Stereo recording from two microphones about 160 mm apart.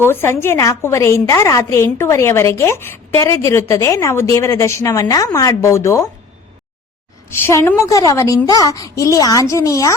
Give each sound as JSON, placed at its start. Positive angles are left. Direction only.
{"t": 0.0, "sound": "a woman's voice", "side_deg": 15}
{"t": 7.3, "sound": "speech", "side_deg": 15}